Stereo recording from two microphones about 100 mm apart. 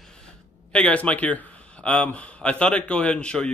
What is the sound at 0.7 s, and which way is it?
Speech, 10° left (ahead or behind).